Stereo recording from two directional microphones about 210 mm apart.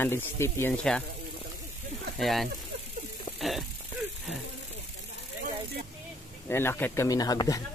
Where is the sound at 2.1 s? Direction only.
Centre (ahead or behind).